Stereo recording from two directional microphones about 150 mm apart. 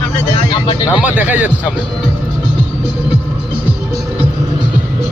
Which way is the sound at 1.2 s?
10° right (ahead or behind).